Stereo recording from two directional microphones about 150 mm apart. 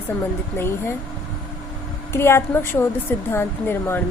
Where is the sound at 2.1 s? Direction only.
15° left (ahead or behind).